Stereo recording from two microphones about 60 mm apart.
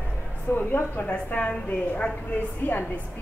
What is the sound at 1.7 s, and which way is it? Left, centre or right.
A woman's voice, left.